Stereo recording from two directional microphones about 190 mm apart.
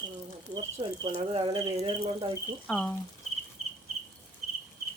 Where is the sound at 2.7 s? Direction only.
5° left (ahead or behind).